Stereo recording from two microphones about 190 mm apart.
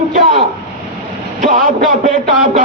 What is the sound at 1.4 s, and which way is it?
Speech, 45° right (ahead or behind).